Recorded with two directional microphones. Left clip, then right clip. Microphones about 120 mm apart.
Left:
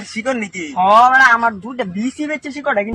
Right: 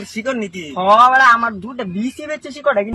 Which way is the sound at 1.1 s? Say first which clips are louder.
Even; 25° right (ahead or behind).